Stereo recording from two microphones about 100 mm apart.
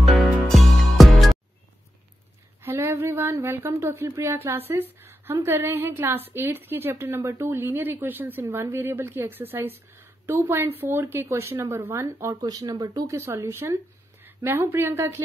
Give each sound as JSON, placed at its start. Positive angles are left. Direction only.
{"t": 0.0, "sound": "music", "side_deg": 0}
{"t": 2.6, "sound": "speech", "side_deg": -25}